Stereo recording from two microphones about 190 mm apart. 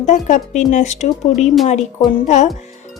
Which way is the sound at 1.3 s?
Centre (ahead or behind).